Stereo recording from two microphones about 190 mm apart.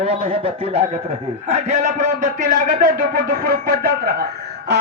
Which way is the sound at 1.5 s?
40° right (ahead or behind).